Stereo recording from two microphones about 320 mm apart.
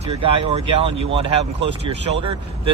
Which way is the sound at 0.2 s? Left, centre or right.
Centre.